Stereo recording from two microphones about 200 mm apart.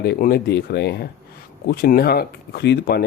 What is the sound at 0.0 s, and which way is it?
Speech, 50° left (ahead or behind).